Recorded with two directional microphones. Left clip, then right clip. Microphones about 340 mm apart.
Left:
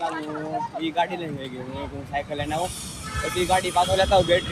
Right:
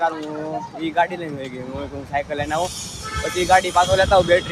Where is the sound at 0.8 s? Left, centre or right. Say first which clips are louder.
Right 6 dB; centre.